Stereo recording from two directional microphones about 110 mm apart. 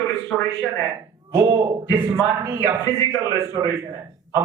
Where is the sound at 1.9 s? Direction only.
15° right (ahead or behind).